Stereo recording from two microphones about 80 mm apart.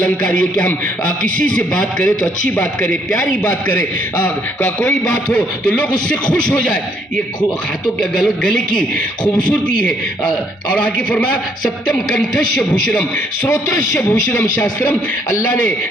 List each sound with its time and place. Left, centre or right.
0.0 s a man's voice: centre
4.9 s a man's voice: centre
7.9 s a man's voice: centre
10.7 s a man's voice: centre
13.5 s a man's voice: left
14.3 s speech: left